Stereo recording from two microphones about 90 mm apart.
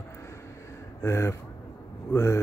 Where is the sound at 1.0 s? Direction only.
30° left (ahead or behind).